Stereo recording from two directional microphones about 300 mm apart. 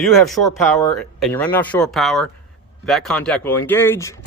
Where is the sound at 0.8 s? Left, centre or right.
Centre.